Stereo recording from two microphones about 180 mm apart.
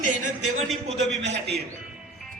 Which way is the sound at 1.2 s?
70° right (ahead or behind).